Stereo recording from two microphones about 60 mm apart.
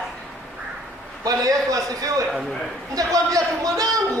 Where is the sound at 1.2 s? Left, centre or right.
Right.